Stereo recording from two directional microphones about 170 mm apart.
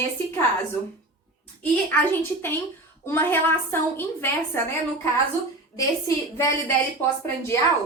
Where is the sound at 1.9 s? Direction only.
10° left (ahead or behind).